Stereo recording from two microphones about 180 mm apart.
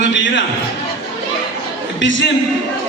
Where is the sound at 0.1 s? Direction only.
90° left.